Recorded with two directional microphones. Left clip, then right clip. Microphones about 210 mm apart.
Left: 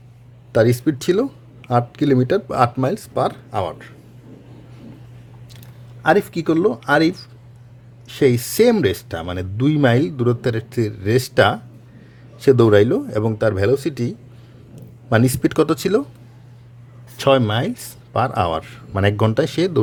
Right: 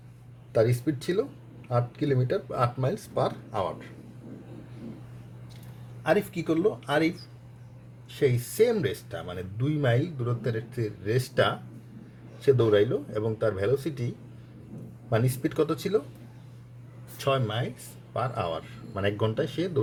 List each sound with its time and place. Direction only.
0.5 s speech: 45° left (ahead or behind)
6.0 s speech: 50° left (ahead or behind)
15.1 s speech: 50° left (ahead or behind)
17.2 s speech: 50° left (ahead or behind)